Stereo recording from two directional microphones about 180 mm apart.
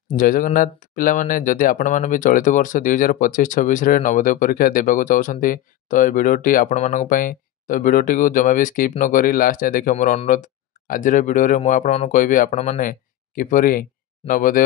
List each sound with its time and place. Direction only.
0.1 s speech: 50° left (ahead or behind)